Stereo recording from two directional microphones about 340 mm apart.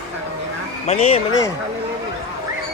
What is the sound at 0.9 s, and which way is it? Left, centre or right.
Speech, centre.